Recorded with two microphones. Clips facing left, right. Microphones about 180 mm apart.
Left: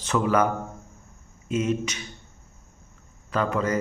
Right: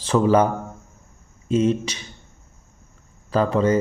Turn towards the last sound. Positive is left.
turn(degrees=-30)  # may be behind; listen again after turning